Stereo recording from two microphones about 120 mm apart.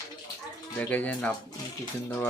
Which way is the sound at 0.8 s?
15° left (ahead or behind).